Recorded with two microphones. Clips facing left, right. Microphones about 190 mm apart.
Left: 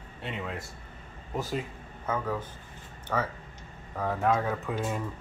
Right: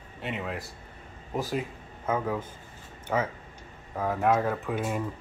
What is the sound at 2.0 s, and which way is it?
Speech, 10° right (ahead or behind).